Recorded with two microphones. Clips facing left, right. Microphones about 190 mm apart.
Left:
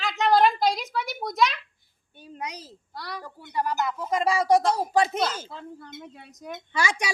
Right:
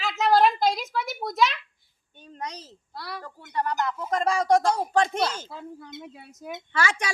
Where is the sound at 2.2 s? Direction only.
10° left (ahead or behind).